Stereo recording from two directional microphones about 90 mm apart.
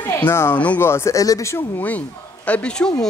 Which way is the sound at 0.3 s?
30° left (ahead or behind).